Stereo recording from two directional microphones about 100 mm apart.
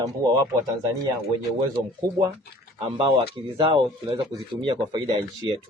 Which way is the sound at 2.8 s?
70° right (ahead or behind).